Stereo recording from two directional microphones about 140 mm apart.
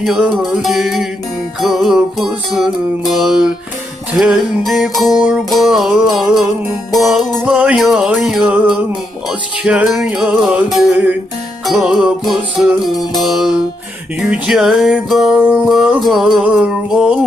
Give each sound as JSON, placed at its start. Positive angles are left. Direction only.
{"t": 0.0, "sound": "music", "side_deg": 0}
{"t": 12.8, "sound": "music", "side_deg": 30}
{"t": 13.2, "sound": "music", "side_deg": 0}